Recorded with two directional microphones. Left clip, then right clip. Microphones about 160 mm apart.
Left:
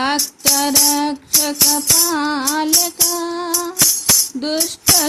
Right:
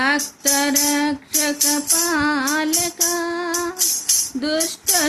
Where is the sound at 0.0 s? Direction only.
15° left (ahead or behind).